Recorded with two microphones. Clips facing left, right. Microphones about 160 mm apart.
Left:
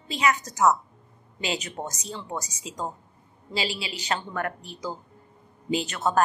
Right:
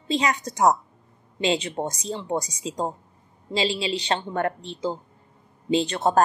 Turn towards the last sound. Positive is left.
turn(degrees=-35)  # may be behind; listen again after turning